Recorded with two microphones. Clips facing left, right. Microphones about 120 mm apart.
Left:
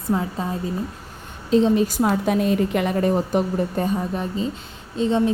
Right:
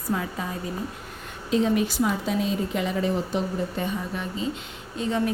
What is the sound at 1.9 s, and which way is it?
A woman's voice, 50° left (ahead or behind).